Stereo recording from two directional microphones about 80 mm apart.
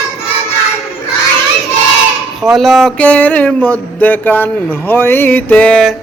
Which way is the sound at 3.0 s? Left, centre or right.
Centre.